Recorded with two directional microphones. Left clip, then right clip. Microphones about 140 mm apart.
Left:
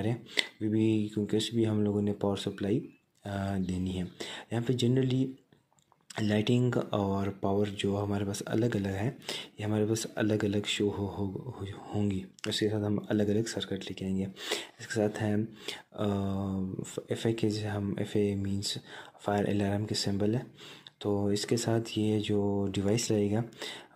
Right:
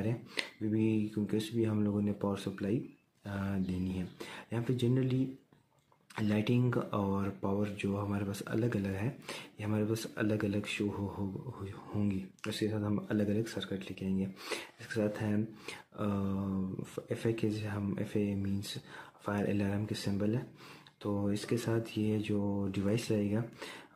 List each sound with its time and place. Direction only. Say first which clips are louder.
0.0 s speech: left 6 dB; 25° left (ahead or behind)